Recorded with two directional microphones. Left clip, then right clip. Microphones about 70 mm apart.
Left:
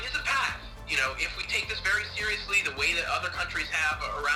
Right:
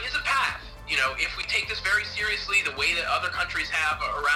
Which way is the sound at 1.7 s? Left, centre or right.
Right.